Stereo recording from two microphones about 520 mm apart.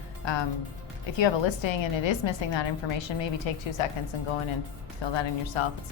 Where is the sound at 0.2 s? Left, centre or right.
Left.